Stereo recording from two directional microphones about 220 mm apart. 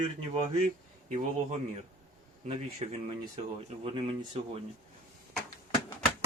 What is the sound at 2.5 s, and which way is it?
Speech, 25° right (ahead or behind).